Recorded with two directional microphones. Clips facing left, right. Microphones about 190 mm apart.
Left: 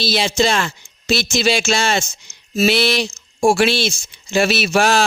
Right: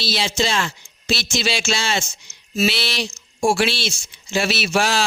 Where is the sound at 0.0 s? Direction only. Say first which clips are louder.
Left 5 dB; 50° left (ahead or behind).